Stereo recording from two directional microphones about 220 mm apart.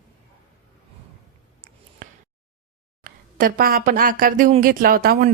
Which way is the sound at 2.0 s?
35° right (ahead or behind).